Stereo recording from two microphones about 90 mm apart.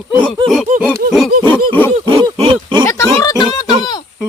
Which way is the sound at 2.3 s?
90° right.